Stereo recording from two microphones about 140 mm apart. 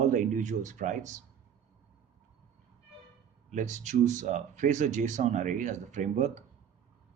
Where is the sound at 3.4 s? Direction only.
60° right (ahead or behind).